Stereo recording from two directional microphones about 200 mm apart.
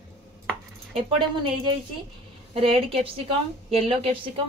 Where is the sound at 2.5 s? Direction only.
30° right (ahead or behind).